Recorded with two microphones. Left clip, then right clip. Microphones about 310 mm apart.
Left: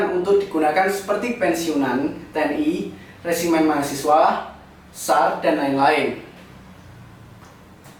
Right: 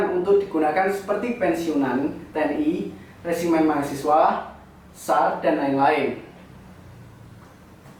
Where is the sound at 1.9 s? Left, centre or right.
Centre.